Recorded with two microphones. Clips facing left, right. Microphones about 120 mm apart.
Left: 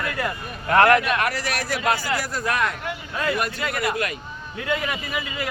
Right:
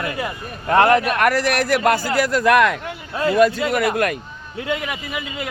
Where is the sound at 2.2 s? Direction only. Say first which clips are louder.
Right 9 dB; 85° right.